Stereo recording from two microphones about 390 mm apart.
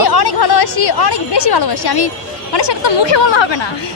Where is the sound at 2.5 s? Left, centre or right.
Left.